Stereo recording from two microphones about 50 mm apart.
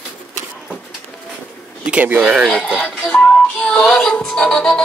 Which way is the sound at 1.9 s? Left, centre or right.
Right.